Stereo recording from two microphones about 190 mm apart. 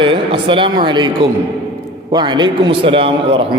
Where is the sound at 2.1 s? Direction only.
25° right (ahead or behind).